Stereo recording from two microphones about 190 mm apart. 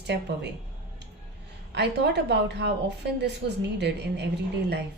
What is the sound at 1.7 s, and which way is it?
A woman's voice, 60° right (ahead or behind).